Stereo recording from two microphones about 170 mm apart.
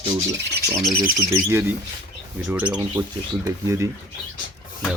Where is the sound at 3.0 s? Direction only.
15° right (ahead or behind).